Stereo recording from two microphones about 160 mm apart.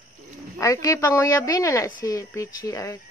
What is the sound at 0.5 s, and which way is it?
Speech, 20° left (ahead or behind).